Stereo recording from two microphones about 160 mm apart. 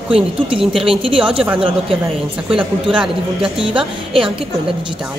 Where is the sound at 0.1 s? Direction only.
35° right (ahead or behind).